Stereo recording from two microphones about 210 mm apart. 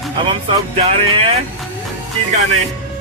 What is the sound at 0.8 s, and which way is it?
Speech, 30° right (ahead or behind).